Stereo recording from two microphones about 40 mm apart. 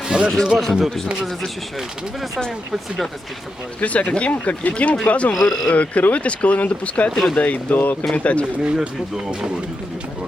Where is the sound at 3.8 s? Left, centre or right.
Left.